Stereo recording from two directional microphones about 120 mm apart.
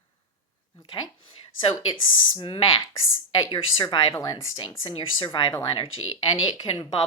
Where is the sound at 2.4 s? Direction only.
55° left (ahead or behind).